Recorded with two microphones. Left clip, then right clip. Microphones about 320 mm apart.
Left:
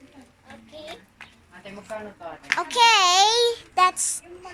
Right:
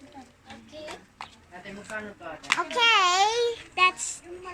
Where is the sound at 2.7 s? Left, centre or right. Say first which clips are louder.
Left 5 dB; centre.